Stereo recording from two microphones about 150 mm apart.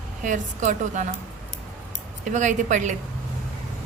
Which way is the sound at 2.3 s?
55° right (ahead or behind).